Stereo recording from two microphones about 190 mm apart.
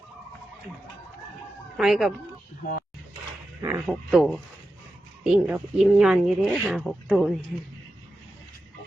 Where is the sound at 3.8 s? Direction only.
5° right (ahead or behind).